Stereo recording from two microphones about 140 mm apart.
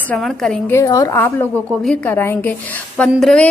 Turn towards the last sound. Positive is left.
turn(degrees=5)  # may be behind; listen again after turning